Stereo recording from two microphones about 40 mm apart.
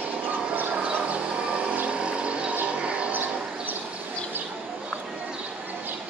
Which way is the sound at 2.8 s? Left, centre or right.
Right.